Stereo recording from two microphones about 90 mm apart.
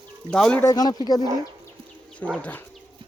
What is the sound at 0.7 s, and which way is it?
Speech, 45° left (ahead or behind).